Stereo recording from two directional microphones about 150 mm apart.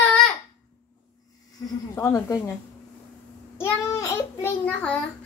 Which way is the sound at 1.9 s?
20° left (ahead or behind).